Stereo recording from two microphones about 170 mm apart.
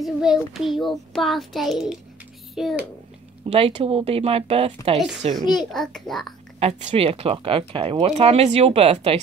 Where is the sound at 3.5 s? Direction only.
40° right (ahead or behind).